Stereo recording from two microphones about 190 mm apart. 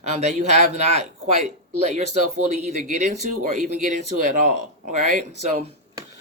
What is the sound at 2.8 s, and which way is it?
Speech, 40° right (ahead or behind).